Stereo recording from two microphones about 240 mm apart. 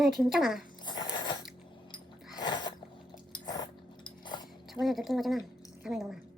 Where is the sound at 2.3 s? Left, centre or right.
Centre.